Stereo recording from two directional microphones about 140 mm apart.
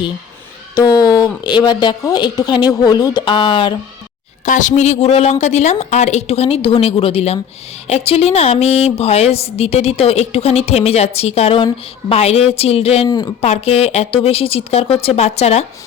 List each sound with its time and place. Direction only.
0.8 s speech: 25° left (ahead or behind)
4.4 s a woman's voice: 65° left (ahead or behind); by 13.1 s 45° left (ahead or behind)
13.1 s speech: 30° left (ahead or behind)
13.4 s a woman's voice: 45° left (ahead or behind)